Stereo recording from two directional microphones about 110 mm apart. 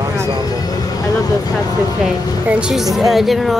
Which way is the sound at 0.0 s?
25° right (ahead or behind).